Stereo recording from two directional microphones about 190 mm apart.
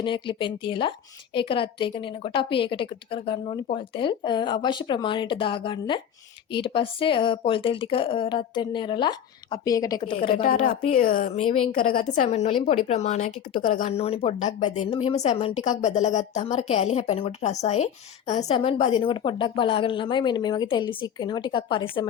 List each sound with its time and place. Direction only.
0.0 s a woman's voice: 25° left (ahead or behind)
10.4 s a woman's voice: 45° left (ahead or behind)
11.3 s speech: 30° left (ahead or behind)
11.9 s a woman's voice: 45° left (ahead or behind); by 22.1 s 25° left (ahead or behind)